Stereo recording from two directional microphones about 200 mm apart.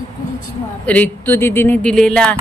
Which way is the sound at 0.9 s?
10° left (ahead or behind).